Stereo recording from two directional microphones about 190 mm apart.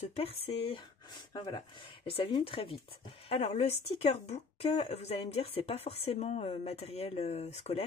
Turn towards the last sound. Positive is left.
turn(degrees=35)  # may be behind; listen again after turning